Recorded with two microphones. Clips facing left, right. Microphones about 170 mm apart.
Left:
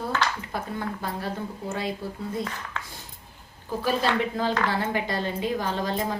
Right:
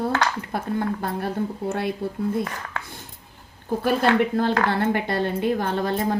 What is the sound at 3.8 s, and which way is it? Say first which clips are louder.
A woman's voice: right 5 dB; 55° right (ahead or behind).